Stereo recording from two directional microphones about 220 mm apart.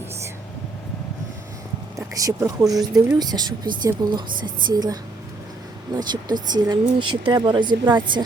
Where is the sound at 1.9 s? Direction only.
15° right (ahead or behind).